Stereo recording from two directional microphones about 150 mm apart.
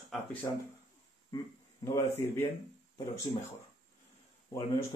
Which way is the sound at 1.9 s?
15° left (ahead or behind).